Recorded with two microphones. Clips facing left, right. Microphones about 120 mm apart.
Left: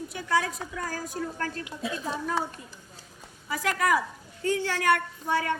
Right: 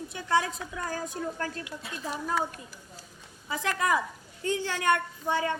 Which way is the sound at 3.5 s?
20° right (ahead or behind).